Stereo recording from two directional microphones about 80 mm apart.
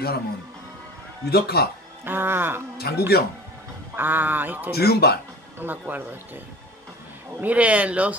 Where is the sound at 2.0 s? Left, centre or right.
Right.